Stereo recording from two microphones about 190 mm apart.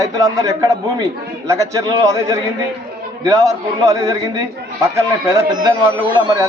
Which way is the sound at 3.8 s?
20° right (ahead or behind).